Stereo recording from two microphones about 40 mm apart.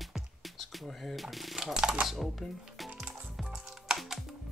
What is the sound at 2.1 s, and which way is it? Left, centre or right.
Speech, centre.